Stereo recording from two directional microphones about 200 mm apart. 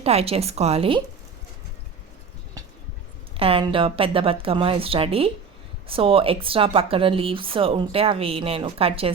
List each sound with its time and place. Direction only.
0.0 s speech: 30° right (ahead or behind)
3.3 s a woman's voice: 30° right (ahead or behind)